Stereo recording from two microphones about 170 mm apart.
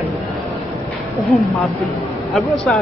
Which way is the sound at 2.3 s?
Centre (ahead or behind).